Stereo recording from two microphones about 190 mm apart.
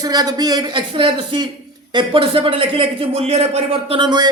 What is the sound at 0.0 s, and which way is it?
A man's voice, 20° right (ahead or behind).